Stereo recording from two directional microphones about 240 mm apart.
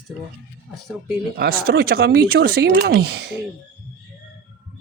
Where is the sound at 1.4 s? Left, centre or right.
Right.